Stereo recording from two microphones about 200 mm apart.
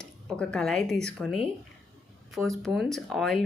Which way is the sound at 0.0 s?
5° left (ahead or behind).